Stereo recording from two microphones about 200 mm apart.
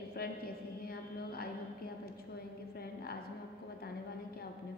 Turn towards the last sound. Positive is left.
turn(degrees=50)  # may be behind; listen again after turning